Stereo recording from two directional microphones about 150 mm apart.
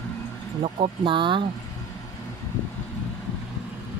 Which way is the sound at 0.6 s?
40° right (ahead or behind).